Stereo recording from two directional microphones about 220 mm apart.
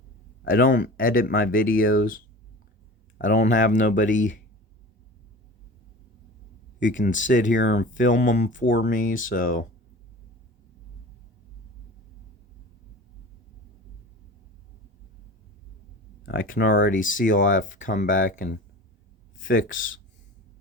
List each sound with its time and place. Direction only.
0.4 s speech: 40° left (ahead or behind)
1.9 s speech: 60° left (ahead or behind)
3.2 s speech: 35° left (ahead or behind)
6.7 s speech: 55° left (ahead or behind)
7.3 s speech: 45° left (ahead or behind)
16.2 s speech: 40° left (ahead or behind)